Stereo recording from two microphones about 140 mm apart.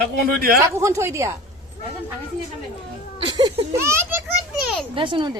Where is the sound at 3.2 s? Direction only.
30° right (ahead or behind).